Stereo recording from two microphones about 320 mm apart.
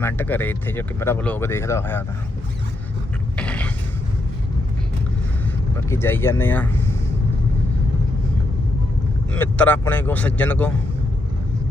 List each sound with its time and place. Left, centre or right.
0.0 s speech: centre
3.3 s mechanisms: centre
5.7 s speech: centre
9.3 s speech: centre